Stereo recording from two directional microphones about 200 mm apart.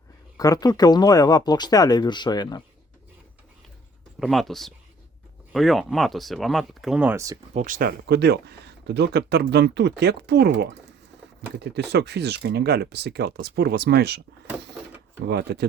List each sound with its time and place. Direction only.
0.3 s speech: 20° left (ahead or behind)
4.2 s speech: centre (ahead or behind)
7.5 s speech: 40° right (ahead or behind)
15.3 s speech: 50° right (ahead or behind)